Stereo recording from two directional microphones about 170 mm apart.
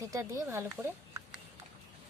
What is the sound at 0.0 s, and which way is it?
Speech, 20° right (ahead or behind).